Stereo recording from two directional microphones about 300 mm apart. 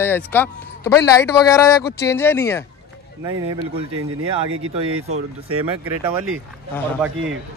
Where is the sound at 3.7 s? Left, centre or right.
Right.